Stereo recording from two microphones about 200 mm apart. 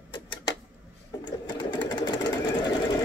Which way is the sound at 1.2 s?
20° left (ahead or behind).